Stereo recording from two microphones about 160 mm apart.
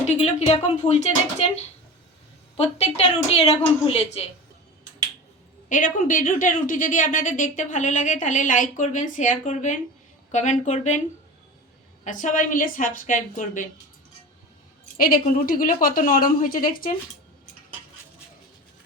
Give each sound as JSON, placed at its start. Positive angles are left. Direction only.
{"t": 0.2, "sound": "a woman's voice", "side_deg": 40}
{"t": 2.6, "sound": "a woman's voice", "side_deg": 40}
{"t": 5.6, "sound": "a woman's voice", "side_deg": 55}
{"t": 12.0, "sound": "a woman's voice", "side_deg": 55}
{"t": 14.9, "sound": "a woman's voice", "side_deg": 65}